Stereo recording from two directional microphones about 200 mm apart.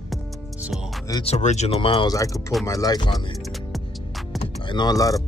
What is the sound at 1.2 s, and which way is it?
Speech, 35° left (ahead or behind).